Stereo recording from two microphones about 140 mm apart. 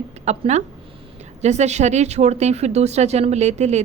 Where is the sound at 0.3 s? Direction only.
55° right (ahead or behind).